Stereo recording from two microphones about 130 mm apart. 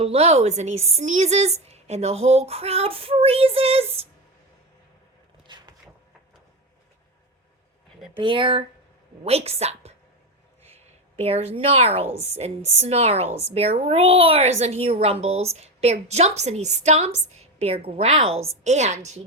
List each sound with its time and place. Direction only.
0.0 s a woman's voice: 50° right (ahead or behind)
5.5 s vehicle: 35° right (ahead or behind)
8.2 s speech: 40° right (ahead or behind)
9.2 s a woman's voice: 50° right (ahead or behind)
11.2 s a woman's voice: 50° right (ahead or behind)
18.6 s a woman's voice: 60° right (ahead or behind)